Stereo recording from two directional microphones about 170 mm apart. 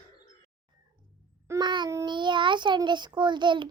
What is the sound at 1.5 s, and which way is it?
A child's voice, 25° right (ahead or behind).